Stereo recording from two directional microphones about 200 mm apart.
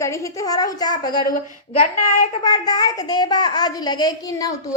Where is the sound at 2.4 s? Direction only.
20° left (ahead or behind).